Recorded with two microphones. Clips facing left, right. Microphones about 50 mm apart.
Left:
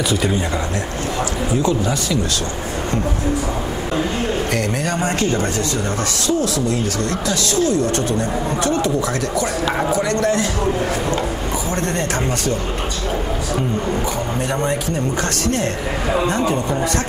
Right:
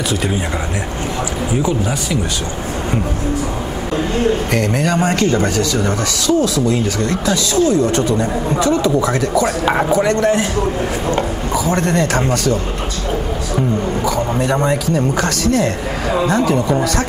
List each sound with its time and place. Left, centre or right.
1.6 s speech: centre
4.6 s speech: right
5.6 s speech: right
7.0 s speech: right
7.8 s speech: left
9.4 s speech: right
11.7 s speech: right